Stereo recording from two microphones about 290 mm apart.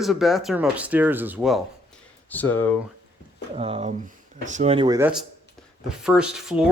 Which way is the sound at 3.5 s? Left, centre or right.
Centre.